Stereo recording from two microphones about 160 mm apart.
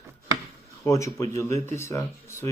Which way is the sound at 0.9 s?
20° left (ahead or behind).